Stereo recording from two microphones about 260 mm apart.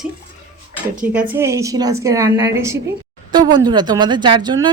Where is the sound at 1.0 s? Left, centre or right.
Centre.